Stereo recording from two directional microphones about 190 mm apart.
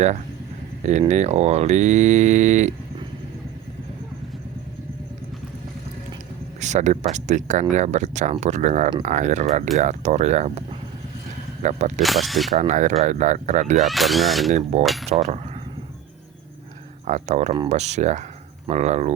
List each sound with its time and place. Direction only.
0.8 s speech: 40° right (ahead or behind)
6.6 s speech: 40° right (ahead or behind)
11.6 s speech: 35° right (ahead or behind)
12.0 s speech: centre (ahead or behind)
12.5 s speech: 40° right (ahead or behind)
13.8 s speech: centre (ahead or behind)
14.5 s speech: 35° right (ahead or behind)
14.8 s speech: centre (ahead or behind)
15.2 s speech: 35° right (ahead or behind)
17.1 s speech: 40° right (ahead or behind)